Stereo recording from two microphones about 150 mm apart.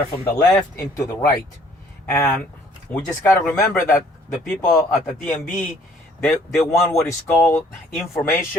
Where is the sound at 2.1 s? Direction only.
15° left (ahead or behind).